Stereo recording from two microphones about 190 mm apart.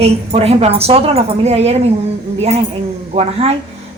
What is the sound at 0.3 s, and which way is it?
Speech, 30° right (ahead or behind).